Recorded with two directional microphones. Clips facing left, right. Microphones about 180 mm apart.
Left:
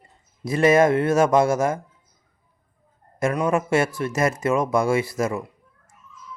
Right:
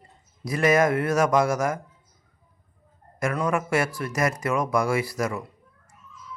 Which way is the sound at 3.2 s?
25° left (ahead or behind).